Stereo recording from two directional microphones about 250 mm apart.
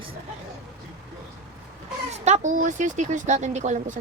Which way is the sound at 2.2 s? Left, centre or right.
Right.